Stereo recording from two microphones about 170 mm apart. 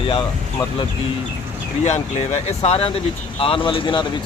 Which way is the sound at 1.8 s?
40° left (ahead or behind).